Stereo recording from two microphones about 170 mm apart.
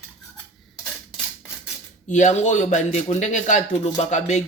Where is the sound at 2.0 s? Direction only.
45° left (ahead or behind).